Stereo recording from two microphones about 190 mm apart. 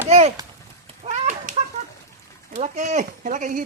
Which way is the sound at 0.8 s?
35° right (ahead or behind).